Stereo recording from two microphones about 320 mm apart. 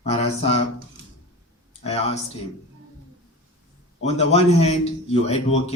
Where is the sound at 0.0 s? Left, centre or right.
Centre.